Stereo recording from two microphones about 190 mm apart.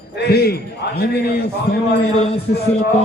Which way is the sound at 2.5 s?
70° left (ahead or behind).